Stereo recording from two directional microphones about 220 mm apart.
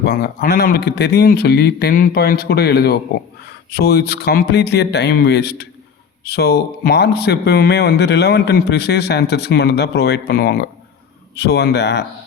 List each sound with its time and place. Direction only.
0.0 s speech: 45° left (ahead or behind)